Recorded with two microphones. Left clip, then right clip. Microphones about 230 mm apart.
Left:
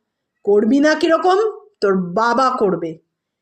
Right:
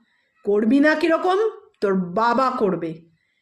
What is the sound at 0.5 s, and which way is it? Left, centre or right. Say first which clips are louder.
Speech: left 3 dB; centre.